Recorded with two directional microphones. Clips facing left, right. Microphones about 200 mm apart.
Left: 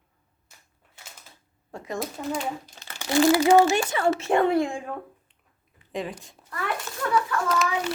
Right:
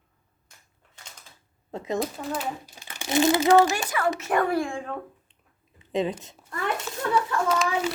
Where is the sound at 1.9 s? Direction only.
Centre (ahead or behind).